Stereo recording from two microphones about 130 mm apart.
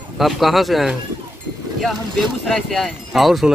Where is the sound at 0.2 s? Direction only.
Centre (ahead or behind).